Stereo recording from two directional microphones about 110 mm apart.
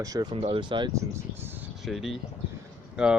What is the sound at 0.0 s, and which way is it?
Speech, 35° right (ahead or behind).